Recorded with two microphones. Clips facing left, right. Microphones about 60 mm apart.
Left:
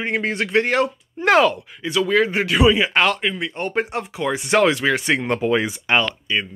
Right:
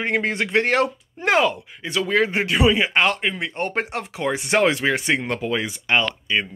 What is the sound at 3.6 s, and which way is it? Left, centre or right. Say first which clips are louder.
Speech: left 2 dB; right.